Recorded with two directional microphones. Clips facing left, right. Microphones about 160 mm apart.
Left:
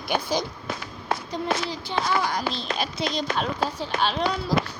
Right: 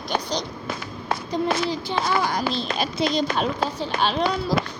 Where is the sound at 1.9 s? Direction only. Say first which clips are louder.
Even; 30° right (ahead or behind).